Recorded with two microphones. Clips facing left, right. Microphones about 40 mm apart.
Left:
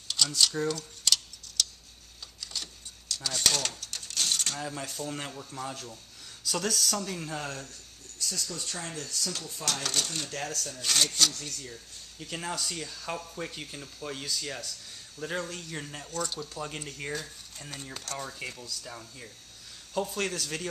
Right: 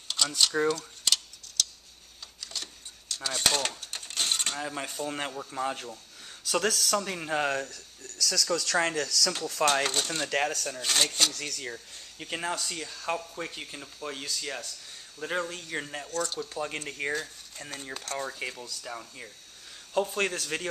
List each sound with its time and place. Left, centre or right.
0.4 s tick-tock: centre
3.2 s speech: centre
7.2 s speech: right
7.7 s speech: right
10.3 s speech: right
10.8 s speech: centre
11.3 s speech: right
11.7 s speech: right
12.4 s speech: centre
16.1 s speech: centre
16.3 s speech: centre